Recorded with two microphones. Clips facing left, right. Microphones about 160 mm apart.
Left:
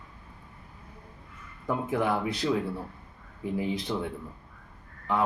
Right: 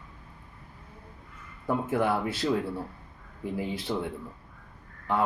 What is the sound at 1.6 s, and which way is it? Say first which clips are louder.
Speech: right 1 dB; 5° right (ahead or behind).